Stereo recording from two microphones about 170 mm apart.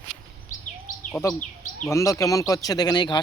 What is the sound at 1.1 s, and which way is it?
Speech, 15° left (ahead or behind).